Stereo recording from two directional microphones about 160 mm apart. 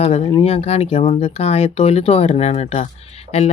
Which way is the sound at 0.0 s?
40° left (ahead or behind).